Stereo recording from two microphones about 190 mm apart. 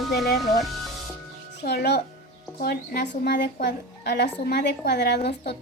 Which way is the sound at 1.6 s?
55° left (ahead or behind).